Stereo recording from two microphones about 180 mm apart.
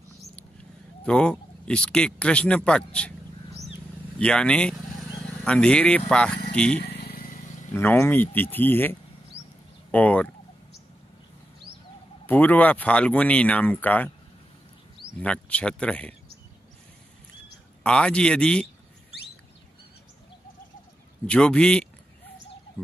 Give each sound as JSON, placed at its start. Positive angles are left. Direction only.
{"t": 1.0, "sound": "speech", "side_deg": 5}
{"t": 4.2, "sound": "speech", "side_deg": 5}
{"t": 6.8, "sound": "vehicle", "side_deg": 60}
{"t": 7.7, "sound": "speech", "side_deg": 10}
{"t": 12.3, "sound": "speech", "side_deg": 10}
{"t": 15.1, "sound": "speech", "side_deg": 5}
{"t": 17.8, "sound": "speech", "side_deg": 5}
{"t": 21.3, "sound": "speech", "side_deg": 5}